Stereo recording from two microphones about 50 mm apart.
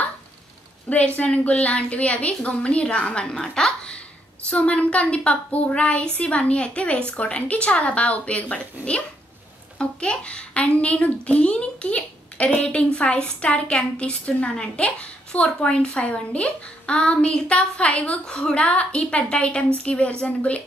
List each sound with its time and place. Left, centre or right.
0.8 s a child's voice: left
4.5 s a child's voice: left